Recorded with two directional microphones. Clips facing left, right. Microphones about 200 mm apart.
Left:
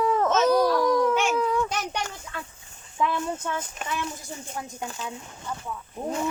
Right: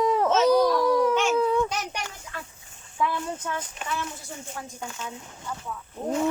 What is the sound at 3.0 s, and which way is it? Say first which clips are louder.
Speech: left 1 dB; 20° left (ahead or behind).